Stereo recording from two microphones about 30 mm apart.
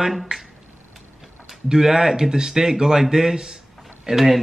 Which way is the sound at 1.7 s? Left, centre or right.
Centre.